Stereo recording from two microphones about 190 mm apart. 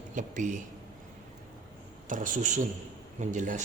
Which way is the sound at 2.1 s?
45° right (ahead or behind).